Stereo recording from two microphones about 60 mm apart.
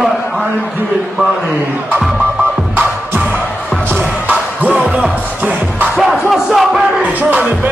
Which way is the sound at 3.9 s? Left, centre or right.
Right.